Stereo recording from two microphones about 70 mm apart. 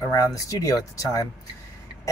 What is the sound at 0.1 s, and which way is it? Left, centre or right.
Speech, left.